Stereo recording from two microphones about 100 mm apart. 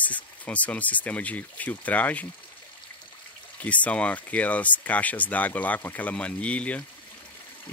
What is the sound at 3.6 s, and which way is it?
Speech, 15° left (ahead or behind).